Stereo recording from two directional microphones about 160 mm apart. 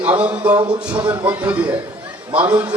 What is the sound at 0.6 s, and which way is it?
Speech, 30° right (ahead or behind).